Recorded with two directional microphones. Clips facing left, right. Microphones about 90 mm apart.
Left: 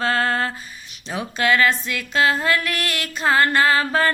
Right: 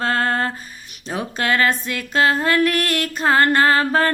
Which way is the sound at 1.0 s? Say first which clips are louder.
Left 1 dB; 40° right (ahead or behind).